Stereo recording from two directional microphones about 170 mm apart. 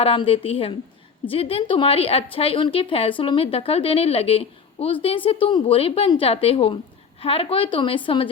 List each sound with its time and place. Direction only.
0.0 s a woman's voice: 30° left (ahead or behind)